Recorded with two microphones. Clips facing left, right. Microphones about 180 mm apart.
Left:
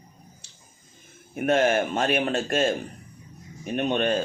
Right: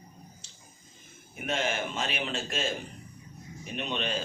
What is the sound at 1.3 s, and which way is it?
Speech, 55° left (ahead or behind).